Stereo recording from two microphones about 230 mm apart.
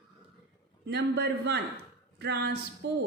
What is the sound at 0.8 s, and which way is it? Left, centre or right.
Speech, right.